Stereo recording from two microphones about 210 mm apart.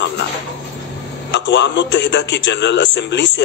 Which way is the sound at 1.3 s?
55° left (ahead or behind).